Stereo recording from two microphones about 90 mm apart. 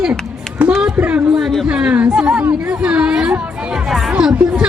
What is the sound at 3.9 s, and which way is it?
Music, 5° right (ahead or behind).